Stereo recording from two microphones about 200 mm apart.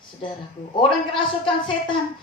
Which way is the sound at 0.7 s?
25° left (ahead or behind).